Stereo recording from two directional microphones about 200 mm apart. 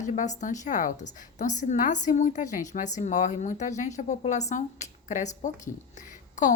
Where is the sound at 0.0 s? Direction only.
35° left (ahead or behind).